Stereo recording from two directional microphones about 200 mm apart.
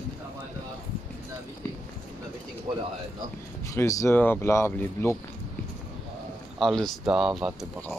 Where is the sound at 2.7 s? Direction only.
25° right (ahead or behind).